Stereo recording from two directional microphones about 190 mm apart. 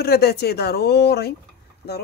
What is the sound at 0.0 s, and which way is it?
Speech, 55° left (ahead or behind).